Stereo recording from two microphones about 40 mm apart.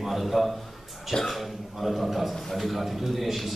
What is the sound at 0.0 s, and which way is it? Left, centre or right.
A man's voice, centre.